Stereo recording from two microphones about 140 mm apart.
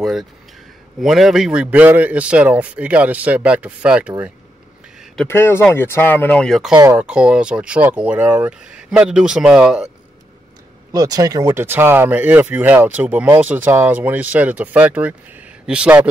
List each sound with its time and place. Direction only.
0.0 s a man's voice: centre (ahead or behind)
5.3 s speech: 15° left (ahead or behind)
6.7 s speech: 25° right (ahead or behind)
7.0 s a man's voice: 5° right (ahead or behind)
10.9 s a man's voice: 25° right (ahead or behind); by 16.1 s 10° right (ahead or behind)